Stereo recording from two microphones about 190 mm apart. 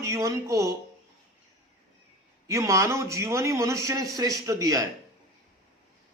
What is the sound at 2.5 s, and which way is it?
A man's voice, 15° right (ahead or behind).